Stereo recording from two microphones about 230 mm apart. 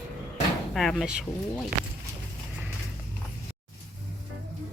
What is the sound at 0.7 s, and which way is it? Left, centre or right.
Speech, centre.